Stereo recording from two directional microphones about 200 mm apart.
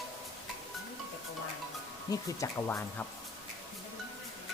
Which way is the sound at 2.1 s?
15° left (ahead or behind).